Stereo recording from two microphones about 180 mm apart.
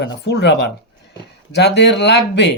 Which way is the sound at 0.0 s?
70° left (ahead or behind).